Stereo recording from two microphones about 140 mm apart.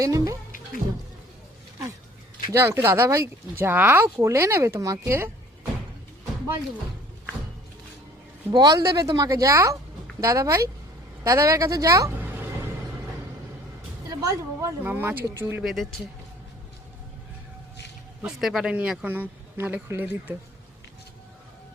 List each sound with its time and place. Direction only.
0.0 s speech: 25° right (ahead or behind)
2.5 s speech: 20° right (ahead or behind)
8.5 s speech: 25° right (ahead or behind)
14.1 s speech: 20° right (ahead or behind)
15.6 s speech: centre (ahead or behind)
18.2 s speech: centre (ahead or behind)